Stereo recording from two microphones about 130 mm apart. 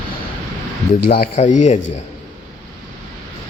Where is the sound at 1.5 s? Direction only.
65° left (ahead or behind).